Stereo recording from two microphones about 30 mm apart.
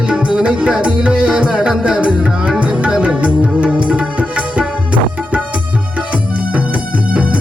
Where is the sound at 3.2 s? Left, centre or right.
Right.